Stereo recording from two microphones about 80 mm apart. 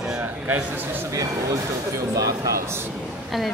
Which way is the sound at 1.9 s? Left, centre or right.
Right.